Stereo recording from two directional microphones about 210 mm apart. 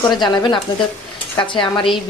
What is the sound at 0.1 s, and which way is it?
Speech, 20° left (ahead or behind).